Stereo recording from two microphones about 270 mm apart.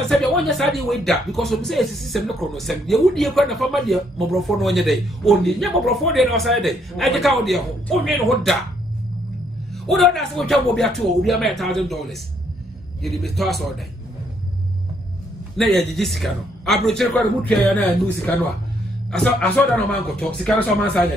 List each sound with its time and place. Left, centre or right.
0.4 s speech: centre
9.8 s speech: centre
15.5 s speech: centre